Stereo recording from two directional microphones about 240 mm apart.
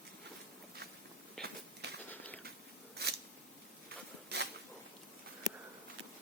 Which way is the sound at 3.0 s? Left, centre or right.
Right.